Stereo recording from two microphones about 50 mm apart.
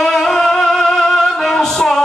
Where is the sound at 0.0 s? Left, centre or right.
Centre.